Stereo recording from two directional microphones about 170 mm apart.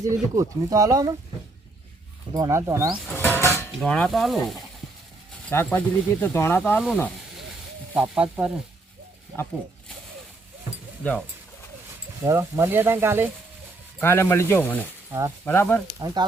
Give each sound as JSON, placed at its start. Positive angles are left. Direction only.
{"t": 0.0, "sound": "speech", "side_deg": -20}
{"t": 2.3, "sound": "speech", "side_deg": -20}
{"t": 2.9, "sound": "stir", "side_deg": 0}
{"t": 3.2, "sound": "a sound", "side_deg": 15}
{"t": 3.7, "sound": "stir", "side_deg": 5}
{"t": 5.5, "sound": "speech", "side_deg": 10}
{"t": 12.2, "sound": "speech", "side_deg": -15}
{"t": 14.0, "sound": "speech", "side_deg": 15}
{"t": 16.0, "sound": "speech", "side_deg": -20}